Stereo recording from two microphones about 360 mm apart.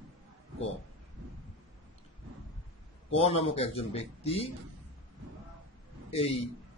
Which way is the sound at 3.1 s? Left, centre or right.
Centre.